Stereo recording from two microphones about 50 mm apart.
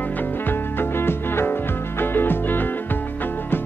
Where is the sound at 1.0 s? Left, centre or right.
Left.